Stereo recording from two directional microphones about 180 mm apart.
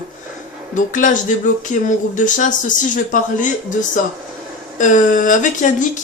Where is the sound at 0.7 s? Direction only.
45° left (ahead or behind).